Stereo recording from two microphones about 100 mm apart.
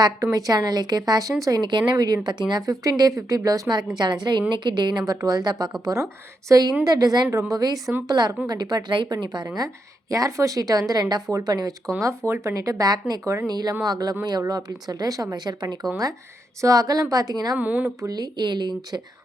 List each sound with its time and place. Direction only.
0.0 s a woman's voice: 35° right (ahead or behind)
9.6 s a woman's voice: 35° right (ahead or behind)
12.0 s a woman's voice: 30° right (ahead or behind)
17.6 s speech: 15° right (ahead or behind)
17.8 s a woman's voice: 35° right (ahead or behind)